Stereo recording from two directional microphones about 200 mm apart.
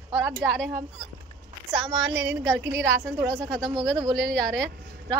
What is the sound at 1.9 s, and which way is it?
A woman's voice, 60° right (ahead or behind).